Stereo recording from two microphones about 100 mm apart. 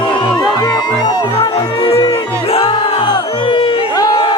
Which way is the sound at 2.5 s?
80° left.